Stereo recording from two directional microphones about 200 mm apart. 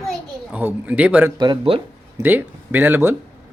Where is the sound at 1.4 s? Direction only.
25° right (ahead or behind).